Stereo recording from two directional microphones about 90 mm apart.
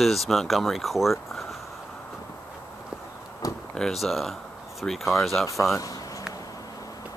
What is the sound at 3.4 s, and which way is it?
Door, 40° left (ahead or behind).